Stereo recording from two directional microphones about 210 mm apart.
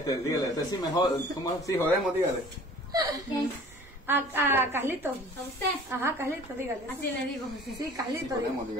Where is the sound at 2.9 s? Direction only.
20° right (ahead or behind).